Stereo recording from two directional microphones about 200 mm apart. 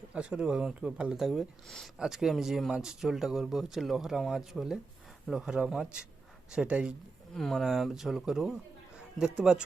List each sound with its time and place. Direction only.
0.1 s speech: 5° right (ahead or behind)